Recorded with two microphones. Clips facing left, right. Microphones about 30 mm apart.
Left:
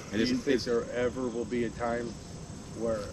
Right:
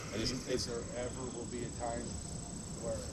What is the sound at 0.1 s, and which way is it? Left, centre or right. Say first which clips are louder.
Speech: left 10 dB; left.